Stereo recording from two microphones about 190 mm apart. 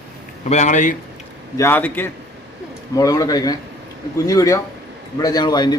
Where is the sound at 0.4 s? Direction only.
35° left (ahead or behind).